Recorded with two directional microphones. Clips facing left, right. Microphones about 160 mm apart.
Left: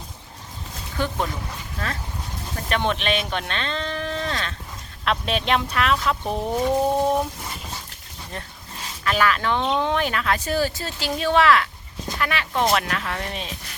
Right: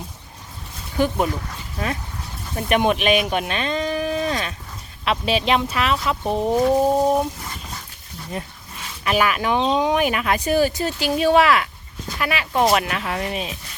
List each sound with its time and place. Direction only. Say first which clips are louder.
0.9 s speech: right 6 dB; 15° right (ahead or behind)
2.6 s speech: right 6 dB; 15° right (ahead or behind)
5.0 s speech: right 3 dB; 5° right (ahead or behind)
9.0 s speech: right 2 dB; 15° right (ahead or behind)